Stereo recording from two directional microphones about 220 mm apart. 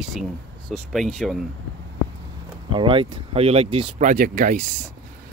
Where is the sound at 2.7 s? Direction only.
25° right (ahead or behind).